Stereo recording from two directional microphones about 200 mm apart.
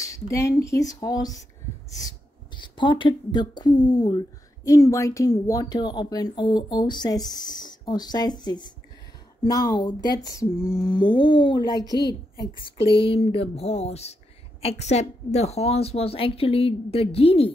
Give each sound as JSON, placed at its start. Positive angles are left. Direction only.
{"t": 0.0, "sound": "speech", "side_deg": 15}